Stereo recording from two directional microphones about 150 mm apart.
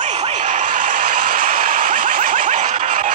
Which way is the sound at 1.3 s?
65° right (ahead or behind).